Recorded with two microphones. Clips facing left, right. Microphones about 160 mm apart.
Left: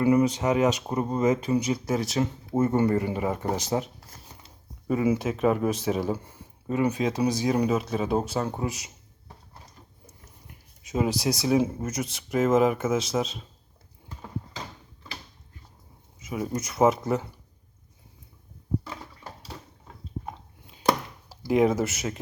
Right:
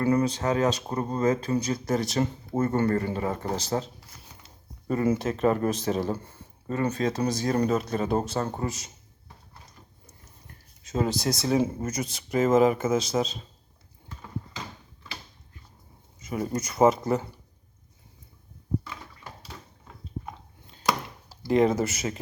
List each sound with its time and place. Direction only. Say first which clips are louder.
0.0 s speech: left 2 dB; 15° left (ahead or behind)
2.6 s speech: left 2 dB; 15° left (ahead or behind)
4.9 s speech: left 1 dB; 5° left (ahead or behind)
10.1 s speech: left 1 dB; 10° left (ahead or behind)
16.2 s speech: right 1 dB; 5° left (ahead or behind)
18.9 s a sound: left 2 dB; 35° left (ahead or behind)
21.2 s speech: even; 5° left (ahead or behind)